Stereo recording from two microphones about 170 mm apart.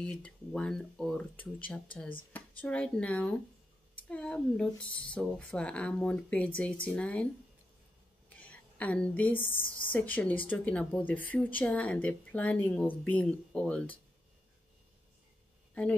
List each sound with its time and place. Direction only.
0.0 s speech: 5° left (ahead or behind)
8.4 s a woman's voice: 10° left (ahead or behind)
9.5 s speech: 55° left (ahead or behind)
9.9 s speech: 10° left (ahead or behind)